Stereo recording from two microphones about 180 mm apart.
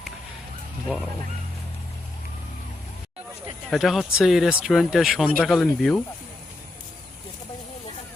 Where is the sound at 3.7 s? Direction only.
Centre (ahead or behind).